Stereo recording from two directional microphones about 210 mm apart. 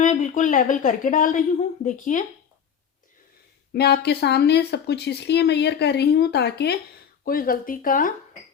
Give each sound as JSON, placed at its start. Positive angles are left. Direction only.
{"t": 0.0, "sound": "speech", "side_deg": 35}
{"t": 3.7, "sound": "speech", "side_deg": 50}